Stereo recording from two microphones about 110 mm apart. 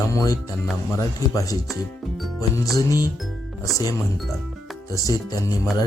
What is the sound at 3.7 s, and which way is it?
Speech, 35° left (ahead or behind).